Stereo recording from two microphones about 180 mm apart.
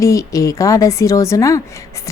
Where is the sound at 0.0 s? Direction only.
15° left (ahead or behind).